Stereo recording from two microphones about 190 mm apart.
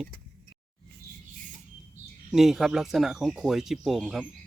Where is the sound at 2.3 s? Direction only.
Centre (ahead or behind).